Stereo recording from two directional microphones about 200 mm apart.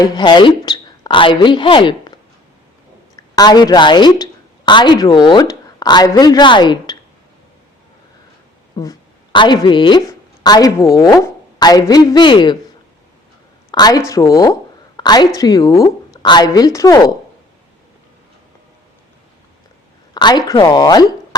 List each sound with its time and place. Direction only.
0.0 s speech: 20° left (ahead or behind)
3.2 s a woman's voice: 20° left (ahead or behind)
8.8 s a woman's voice: 20° left (ahead or behind)
13.7 s speech: 20° left (ahead or behind)
14.9 s a sound: 20° left (ahead or behind)
15.4 s speech: 20° left (ahead or behind)
20.1 s speech: 20° left (ahead or behind)